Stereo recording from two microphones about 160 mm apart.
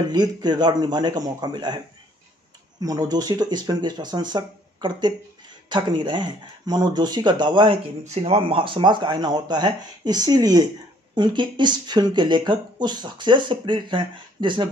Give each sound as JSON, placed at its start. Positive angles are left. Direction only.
{"t": 0.1, "sound": "speech", "side_deg": -25}
{"t": 2.8, "sound": "speech", "side_deg": -25}
{"t": 8.0, "sound": "speech", "side_deg": -40}